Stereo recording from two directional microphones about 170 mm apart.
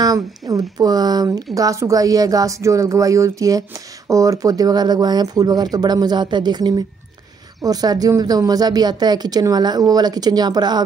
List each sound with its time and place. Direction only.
0.0 s speech: 20° right (ahead or behind)